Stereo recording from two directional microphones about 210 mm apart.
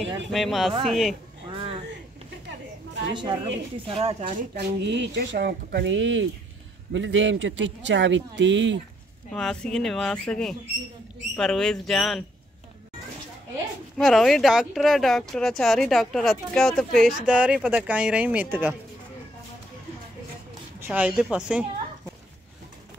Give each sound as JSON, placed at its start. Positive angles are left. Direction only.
{"t": 0.3, "sound": "speech", "side_deg": 0}
{"t": 1.5, "sound": "a sound", "side_deg": -25}
{"t": 3.2, "sound": "a man's voice", "side_deg": -25}
{"t": 9.3, "sound": "speech", "side_deg": 5}
{"t": 13.9, "sound": "speech", "side_deg": 0}
{"t": 20.8, "sound": "speech", "side_deg": -5}